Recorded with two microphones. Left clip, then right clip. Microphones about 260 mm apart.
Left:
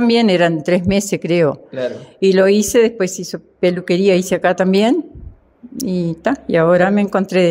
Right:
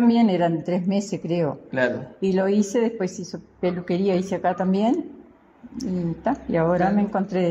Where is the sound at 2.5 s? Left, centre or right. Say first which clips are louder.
Left 9 dB; left.